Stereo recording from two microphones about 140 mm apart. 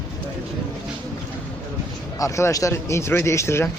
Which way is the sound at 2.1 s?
20° left (ahead or behind).